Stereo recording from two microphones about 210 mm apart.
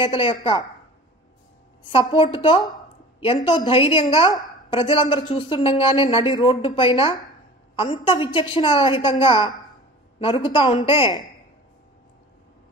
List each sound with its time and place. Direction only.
0.0 s a woman's voice: 25° left (ahead or behind)
1.8 s a woman's voice: 25° left (ahead or behind)